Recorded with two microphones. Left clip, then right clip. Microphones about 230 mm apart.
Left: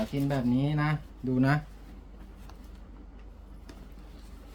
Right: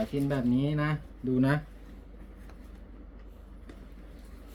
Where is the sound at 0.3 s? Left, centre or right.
Left.